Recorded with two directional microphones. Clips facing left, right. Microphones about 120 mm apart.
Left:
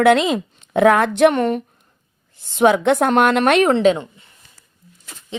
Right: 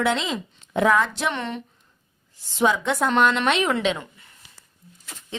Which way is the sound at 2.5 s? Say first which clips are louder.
Left 7 dB; 65° left (ahead or behind).